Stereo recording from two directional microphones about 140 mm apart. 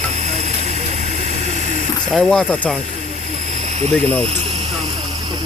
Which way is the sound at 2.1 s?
Centre (ahead or behind).